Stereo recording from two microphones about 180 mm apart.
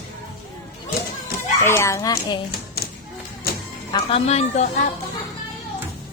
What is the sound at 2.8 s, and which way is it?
Thump, 60° left (ahead or behind).